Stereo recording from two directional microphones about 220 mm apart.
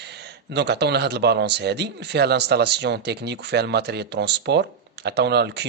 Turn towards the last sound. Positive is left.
turn(degrees=-50)  # may be behind; listen again after turning